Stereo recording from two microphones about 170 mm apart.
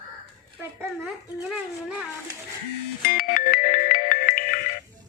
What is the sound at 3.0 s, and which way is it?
Music, 60° left (ahead or behind).